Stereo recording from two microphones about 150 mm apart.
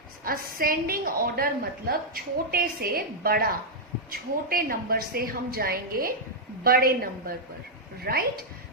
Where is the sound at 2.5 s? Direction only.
90° right.